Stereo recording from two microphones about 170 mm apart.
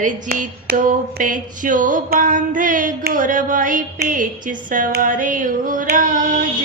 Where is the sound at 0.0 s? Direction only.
55° right (ahead or behind).